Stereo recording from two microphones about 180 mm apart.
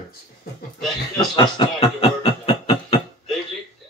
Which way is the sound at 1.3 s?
25° left (ahead or behind).